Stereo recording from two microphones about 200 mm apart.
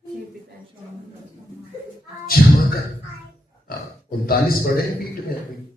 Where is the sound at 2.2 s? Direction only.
45° left (ahead or behind).